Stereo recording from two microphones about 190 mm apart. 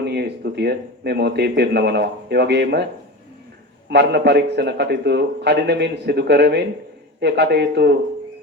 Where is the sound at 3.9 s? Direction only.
60° right (ahead or behind).